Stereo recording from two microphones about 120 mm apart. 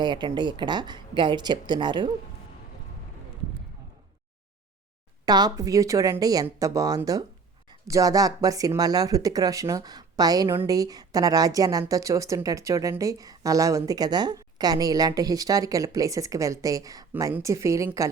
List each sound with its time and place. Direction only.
0.0 s speech: 40° right (ahead or behind)
5.2 s a woman's voice: 35° right (ahead or behind)